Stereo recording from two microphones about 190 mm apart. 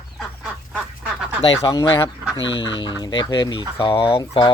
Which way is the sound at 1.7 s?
20° left (ahead or behind).